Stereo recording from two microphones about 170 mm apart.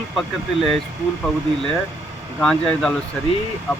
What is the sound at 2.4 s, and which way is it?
Speech, 5° left (ahead or behind).